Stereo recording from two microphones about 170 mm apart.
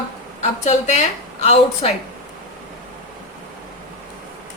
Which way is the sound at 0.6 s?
40° left (ahead or behind).